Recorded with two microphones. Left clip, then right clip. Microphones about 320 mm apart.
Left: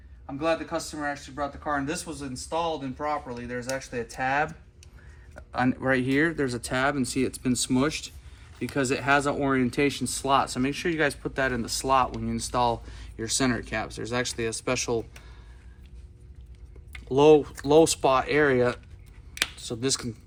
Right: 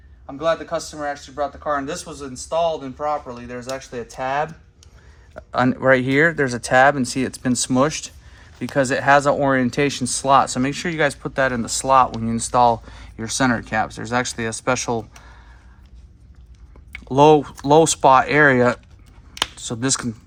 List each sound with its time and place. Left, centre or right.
0.3 s speech: centre
5.5 s speech: right
17.2 s speech: right